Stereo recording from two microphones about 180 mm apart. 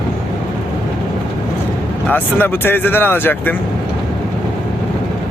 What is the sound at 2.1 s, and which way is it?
Speech, 10° left (ahead or behind).